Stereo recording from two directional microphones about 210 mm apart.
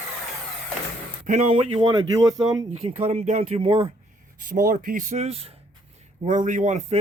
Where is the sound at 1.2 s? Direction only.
35° right (ahead or behind).